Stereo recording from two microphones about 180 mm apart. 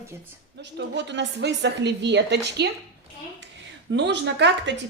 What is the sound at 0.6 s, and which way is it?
A woman's voice, 75° right (ahead or behind).